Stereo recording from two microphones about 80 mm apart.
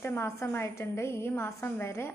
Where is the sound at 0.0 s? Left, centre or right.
Left.